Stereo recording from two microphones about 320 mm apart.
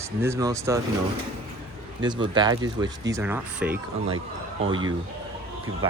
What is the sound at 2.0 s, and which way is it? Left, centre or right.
Speech, centre.